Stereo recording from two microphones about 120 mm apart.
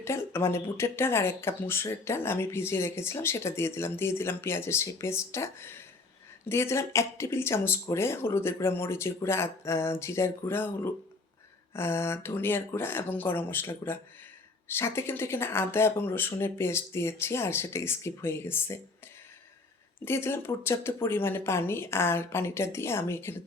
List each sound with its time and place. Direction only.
0.0 s speech: 20° left (ahead or behind)
20.1 s speech: 20° left (ahead or behind)